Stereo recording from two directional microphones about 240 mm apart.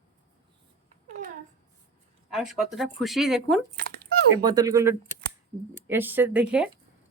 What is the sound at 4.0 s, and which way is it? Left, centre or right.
Speech, centre.